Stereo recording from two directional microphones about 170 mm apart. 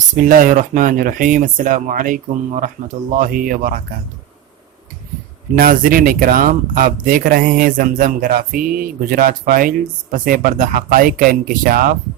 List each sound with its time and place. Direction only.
0.2 s speech: 55° right (ahead or behind)
5.5 s speech: 55° right (ahead or behind)